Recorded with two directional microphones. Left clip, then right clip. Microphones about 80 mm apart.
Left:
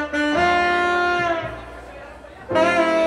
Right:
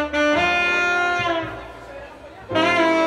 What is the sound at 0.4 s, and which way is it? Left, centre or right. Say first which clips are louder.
Music: left 1 dB; centre.